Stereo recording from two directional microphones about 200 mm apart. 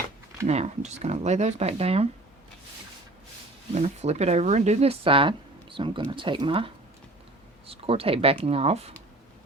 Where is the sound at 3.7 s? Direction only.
35° right (ahead or behind).